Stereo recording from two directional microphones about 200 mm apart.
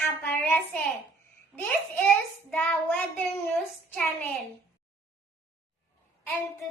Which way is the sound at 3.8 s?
10° left (ahead or behind).